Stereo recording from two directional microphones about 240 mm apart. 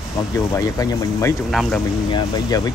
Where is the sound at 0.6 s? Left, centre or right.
Centre.